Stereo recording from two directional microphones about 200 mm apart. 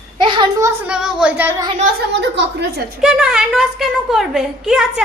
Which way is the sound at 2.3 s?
55° right (ahead or behind).